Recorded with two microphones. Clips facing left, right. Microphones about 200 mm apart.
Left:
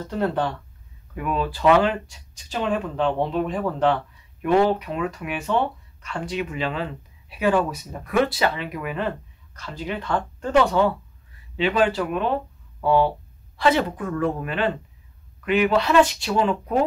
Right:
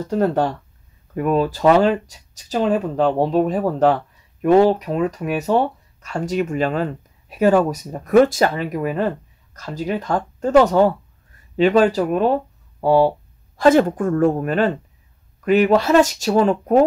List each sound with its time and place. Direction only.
0.1 s speech: 45° right (ahead or behind)